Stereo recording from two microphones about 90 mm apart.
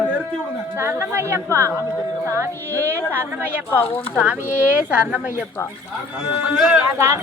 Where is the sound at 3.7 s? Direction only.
25° left (ahead or behind).